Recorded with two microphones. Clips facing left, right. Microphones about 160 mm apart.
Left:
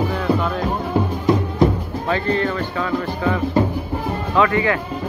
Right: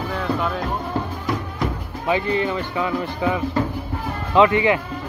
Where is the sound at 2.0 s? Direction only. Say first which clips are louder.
Even; 15° right (ahead or behind).